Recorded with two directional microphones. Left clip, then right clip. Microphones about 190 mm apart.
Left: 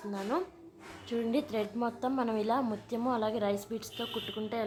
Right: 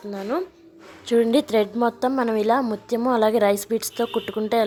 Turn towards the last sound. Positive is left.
turn(degrees=-40)  # may be behind; listen again after turning